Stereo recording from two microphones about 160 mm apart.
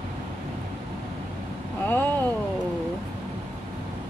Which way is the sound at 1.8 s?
15° left (ahead or behind).